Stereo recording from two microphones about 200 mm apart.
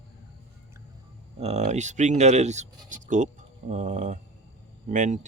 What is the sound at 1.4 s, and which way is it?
Speech, 30° right (ahead or behind).